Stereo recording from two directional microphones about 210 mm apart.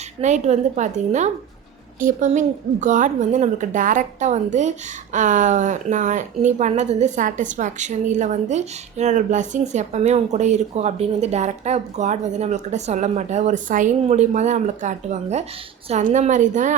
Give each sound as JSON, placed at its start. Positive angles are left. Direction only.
{"t": 0.2, "sound": "a woman's voice", "side_deg": -35}